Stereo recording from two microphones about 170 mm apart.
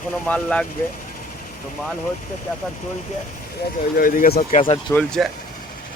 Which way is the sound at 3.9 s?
55° left (ahead or behind).